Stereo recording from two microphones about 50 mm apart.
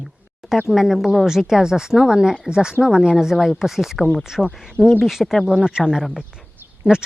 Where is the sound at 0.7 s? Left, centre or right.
Centre.